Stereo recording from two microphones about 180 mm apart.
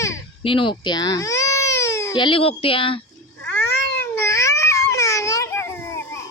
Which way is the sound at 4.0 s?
15° left (ahead or behind).